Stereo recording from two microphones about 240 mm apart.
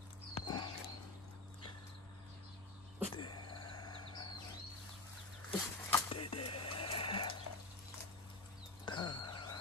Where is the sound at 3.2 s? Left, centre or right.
Centre.